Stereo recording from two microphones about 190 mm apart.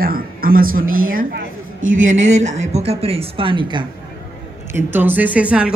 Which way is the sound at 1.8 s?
90° right.